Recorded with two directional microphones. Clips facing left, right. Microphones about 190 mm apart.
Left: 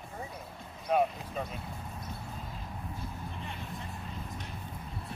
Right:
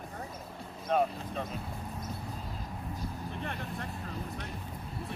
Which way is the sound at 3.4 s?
60° right (ahead or behind).